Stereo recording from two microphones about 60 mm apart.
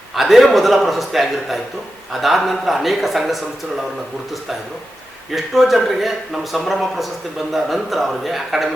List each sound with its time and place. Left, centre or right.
0.2 s a man's voice: centre
5.3 s a man's voice: centre